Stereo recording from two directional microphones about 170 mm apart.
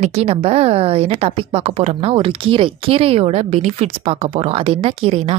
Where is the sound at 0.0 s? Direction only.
40° right (ahead or behind).